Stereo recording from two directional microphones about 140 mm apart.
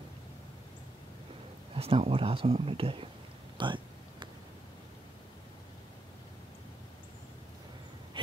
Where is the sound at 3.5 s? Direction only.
35° right (ahead or behind).